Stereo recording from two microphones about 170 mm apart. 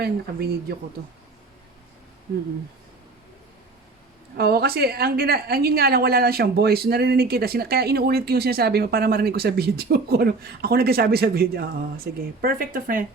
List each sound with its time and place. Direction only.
0.0 s speech: 70° right (ahead or behind)
4.4 s a woman's voice: 65° right (ahead or behind)